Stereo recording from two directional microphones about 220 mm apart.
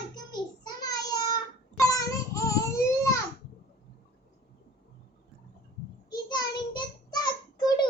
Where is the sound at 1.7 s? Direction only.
15° left (ahead or behind).